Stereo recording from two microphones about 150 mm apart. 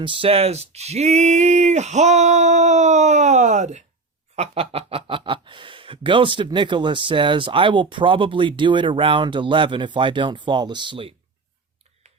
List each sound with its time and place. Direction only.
0.0 s speech: 35° right (ahead or behind); by 3.8 s 50° right (ahead or behind)
4.4 s speech: 40° right (ahead or behind)